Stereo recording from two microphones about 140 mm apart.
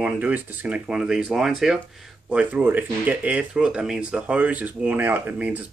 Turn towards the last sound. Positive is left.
turn(degrees=-10)  # may be behind; listen again after turning